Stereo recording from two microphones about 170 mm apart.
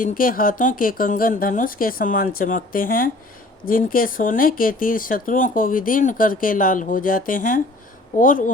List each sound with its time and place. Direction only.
0.0 s speech: 55° left (ahead or behind)